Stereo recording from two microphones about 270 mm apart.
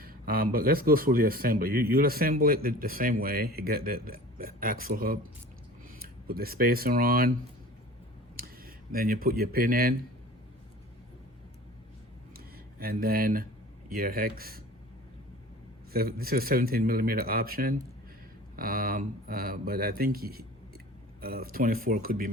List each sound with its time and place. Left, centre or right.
0.0 s speech: right
8.4 s speech: right
12.8 s speech: right
15.9 s speech: right